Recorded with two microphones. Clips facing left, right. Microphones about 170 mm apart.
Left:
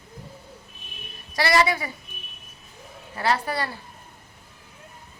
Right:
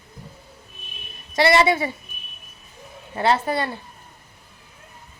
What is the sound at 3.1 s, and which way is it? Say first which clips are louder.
Speech: right 4 dB; 25° right (ahead or behind).